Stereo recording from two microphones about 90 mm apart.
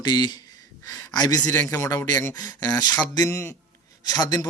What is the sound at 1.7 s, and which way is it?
Speech, 35° left (ahead or behind).